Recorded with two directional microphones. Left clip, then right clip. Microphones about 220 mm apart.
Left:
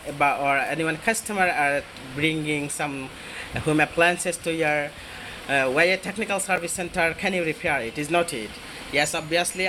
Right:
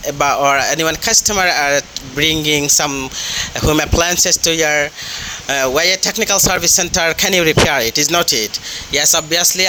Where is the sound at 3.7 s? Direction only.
50° right (ahead or behind).